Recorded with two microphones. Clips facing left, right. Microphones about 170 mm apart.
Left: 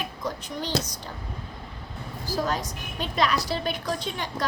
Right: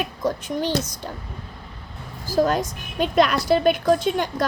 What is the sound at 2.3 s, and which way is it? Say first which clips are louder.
A woman's voice: right 8 dB; 50° right (ahead or behind).